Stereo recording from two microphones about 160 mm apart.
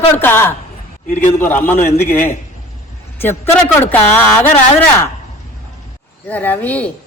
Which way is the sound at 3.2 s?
15° left (ahead or behind).